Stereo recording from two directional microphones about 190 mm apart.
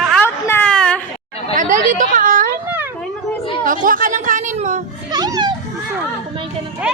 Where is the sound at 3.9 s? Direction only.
45° right (ahead or behind).